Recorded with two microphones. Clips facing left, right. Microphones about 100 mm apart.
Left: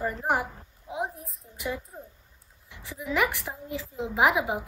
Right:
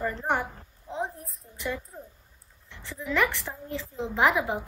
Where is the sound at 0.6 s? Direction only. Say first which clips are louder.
Even; 5° left (ahead or behind).